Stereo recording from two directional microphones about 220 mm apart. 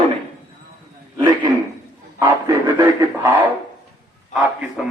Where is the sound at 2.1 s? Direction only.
15° right (ahead or behind).